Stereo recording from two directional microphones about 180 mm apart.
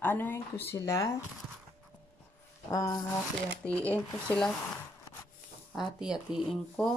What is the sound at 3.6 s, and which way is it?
Speech, 5° left (ahead or behind).